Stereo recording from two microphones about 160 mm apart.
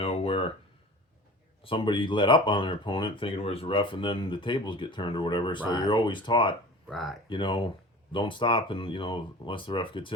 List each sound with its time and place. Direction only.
0.0 s a sound: 35° left (ahead or behind)
1.6 s speech: 30° left (ahead or behind)
6.8 s speech: centre (ahead or behind)
7.3 s speech: 30° left (ahead or behind)